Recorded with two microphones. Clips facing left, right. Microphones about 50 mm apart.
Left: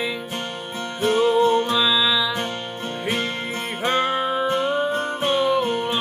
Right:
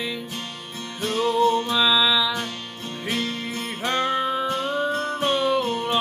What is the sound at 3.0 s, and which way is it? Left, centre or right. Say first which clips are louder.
Music: left 1 dB; left.